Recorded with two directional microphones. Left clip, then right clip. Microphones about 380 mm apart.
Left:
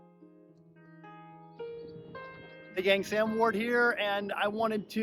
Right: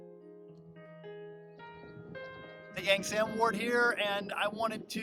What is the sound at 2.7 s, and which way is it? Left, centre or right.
Speech, centre.